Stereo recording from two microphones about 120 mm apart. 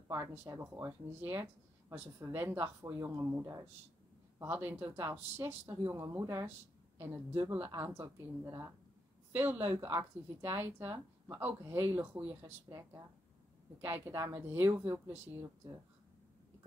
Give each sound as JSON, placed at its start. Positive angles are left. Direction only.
{"t": 0.4, "sound": "speech", "side_deg": -20}
{"t": 7.5, "sound": "speech", "side_deg": -15}
{"t": 14.0, "sound": "a woman's voice", "side_deg": -20}